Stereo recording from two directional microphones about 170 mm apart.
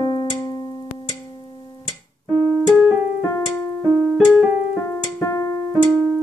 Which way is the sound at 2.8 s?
10° right (ahead or behind).